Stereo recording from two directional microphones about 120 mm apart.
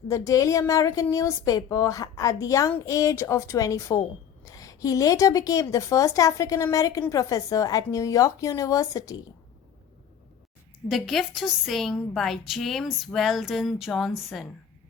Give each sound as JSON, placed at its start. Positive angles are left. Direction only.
{"t": 0.1, "sound": "a woman's voice", "side_deg": 25}
{"t": 10.8, "sound": "a woman's voice", "side_deg": 0}